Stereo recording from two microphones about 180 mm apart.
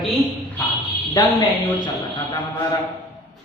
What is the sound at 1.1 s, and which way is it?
A man's voice, 20° left (ahead or behind).